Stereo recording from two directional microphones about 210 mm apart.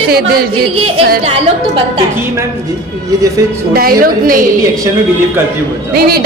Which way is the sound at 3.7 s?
45° right (ahead or behind).